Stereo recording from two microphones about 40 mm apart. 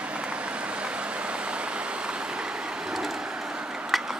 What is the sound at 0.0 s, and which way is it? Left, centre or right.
Vehicle, right.